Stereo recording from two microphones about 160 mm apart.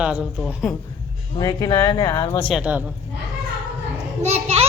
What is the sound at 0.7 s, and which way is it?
Speech, 5° left (ahead or behind).